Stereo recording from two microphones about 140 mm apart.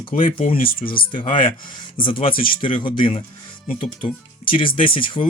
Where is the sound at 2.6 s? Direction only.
35° left (ahead or behind).